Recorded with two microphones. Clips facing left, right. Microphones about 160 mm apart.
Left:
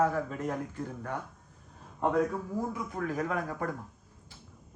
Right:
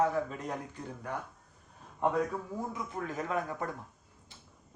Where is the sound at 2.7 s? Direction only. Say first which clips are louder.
Left 3 dB; 25° right (ahead or behind).